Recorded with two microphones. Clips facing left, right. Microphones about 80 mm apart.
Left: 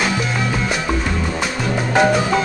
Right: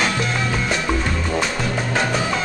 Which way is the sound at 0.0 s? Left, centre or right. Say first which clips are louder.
Left 1 dB; centre.